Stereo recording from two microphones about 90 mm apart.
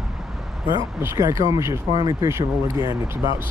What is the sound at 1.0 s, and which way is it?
Speech, 35° right (ahead or behind).